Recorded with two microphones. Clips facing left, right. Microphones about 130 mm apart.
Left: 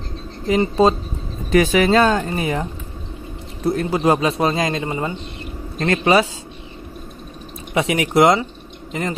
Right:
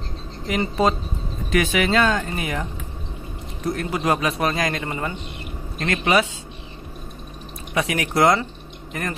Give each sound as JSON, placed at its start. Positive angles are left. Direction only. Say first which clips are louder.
{"t": 0.5, "sound": "a man's voice", "louder": "left 5 dB", "side_deg": 25}
{"t": 5.8, "sound": "speech", "louder": "left 4 dB", "side_deg": 30}
{"t": 7.7, "sound": "a man's voice", "louder": "left 5 dB", "side_deg": 25}